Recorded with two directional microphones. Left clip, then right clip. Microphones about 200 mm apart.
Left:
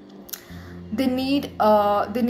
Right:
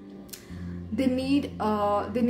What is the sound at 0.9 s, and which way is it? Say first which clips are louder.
A woman's voice: left 3 dB; 5° right (ahead or behind).